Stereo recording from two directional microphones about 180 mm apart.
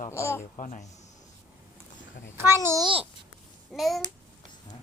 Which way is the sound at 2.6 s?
20° right (ahead or behind).